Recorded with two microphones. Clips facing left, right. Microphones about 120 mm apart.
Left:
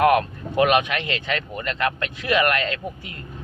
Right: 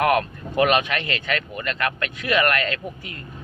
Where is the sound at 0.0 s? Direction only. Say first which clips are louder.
Left 2 dB; 25° left (ahead or behind).